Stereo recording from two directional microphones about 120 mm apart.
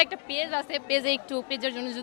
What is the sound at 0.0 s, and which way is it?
Speech, 20° left (ahead or behind).